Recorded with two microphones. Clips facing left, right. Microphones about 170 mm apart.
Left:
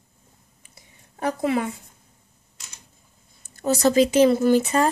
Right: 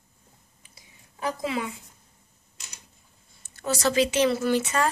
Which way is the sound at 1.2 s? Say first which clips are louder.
Left 6 dB; 55° left (ahead or behind).